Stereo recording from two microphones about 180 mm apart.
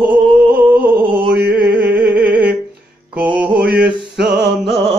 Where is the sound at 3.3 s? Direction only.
5° right (ahead or behind).